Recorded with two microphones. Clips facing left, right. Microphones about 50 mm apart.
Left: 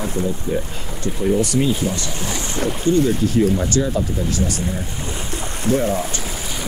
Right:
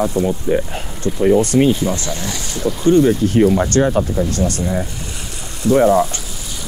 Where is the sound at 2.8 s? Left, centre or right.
Right.